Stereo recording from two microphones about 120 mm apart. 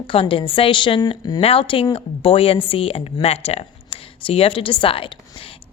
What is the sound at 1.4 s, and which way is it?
Speech, 50° left (ahead or behind).